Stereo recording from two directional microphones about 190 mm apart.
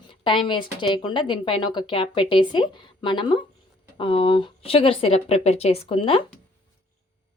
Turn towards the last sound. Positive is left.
turn(degrees=30)  # may be behind; listen again after turning